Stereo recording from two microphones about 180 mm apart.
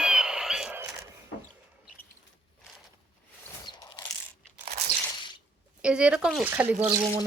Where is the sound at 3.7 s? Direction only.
25° left (ahead or behind).